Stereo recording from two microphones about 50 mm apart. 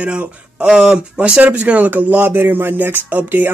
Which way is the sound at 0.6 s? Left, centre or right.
Centre.